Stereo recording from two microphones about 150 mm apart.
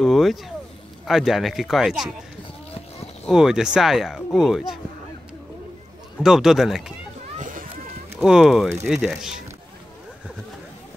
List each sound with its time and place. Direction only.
0.0 s speech: centre (ahead or behind)
3.3 s speech: 5° right (ahead or behind)
6.2 s speech: 5° right (ahead or behind)
7.3 s a sound: 60° right (ahead or behind)
8.2 s speech: 5° right (ahead or behind)